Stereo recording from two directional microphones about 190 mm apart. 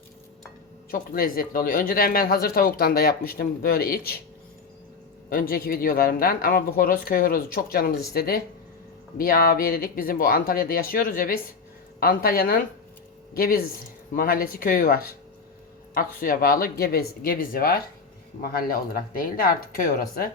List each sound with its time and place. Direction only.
0.9 s speech: 50° left (ahead or behind)
5.3 s speech: 50° left (ahead or behind)